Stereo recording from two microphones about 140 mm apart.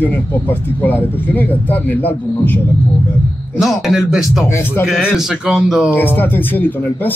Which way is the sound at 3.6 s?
Centre (ahead or behind).